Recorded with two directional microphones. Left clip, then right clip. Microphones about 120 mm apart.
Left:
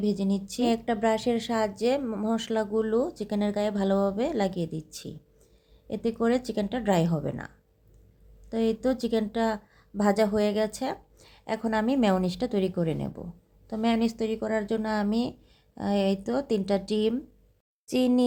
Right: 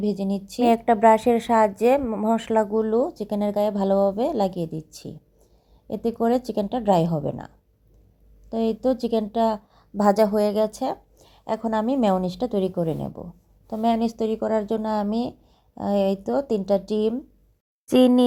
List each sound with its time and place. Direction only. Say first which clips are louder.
0.0 s a woman's voice: right 3 dB; 10° right (ahead or behind); by 2.6 s 5° left (ahead or behind)
2.7 s a woman's voice: right 4 dB; 15° right (ahead or behind)
17.8 s speech: right 9 dB; 25° right (ahead or behind)